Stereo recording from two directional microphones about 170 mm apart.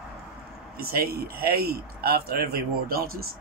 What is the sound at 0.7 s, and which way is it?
Speech, 65° right (ahead or behind).